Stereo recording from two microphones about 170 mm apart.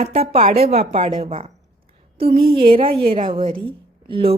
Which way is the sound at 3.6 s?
30° right (ahead or behind).